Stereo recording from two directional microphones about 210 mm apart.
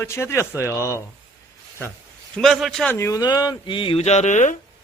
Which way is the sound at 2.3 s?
Centre (ahead or behind).